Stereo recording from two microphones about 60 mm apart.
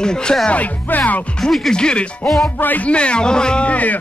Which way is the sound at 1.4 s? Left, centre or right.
Centre.